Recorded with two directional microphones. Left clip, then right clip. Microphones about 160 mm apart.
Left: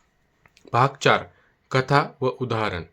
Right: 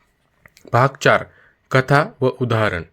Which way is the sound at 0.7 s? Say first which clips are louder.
Right 4 dB; 30° right (ahead or behind).